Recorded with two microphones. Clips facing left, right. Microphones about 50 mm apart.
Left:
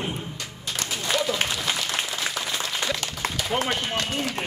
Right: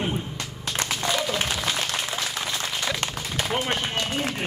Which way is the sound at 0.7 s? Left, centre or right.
Right.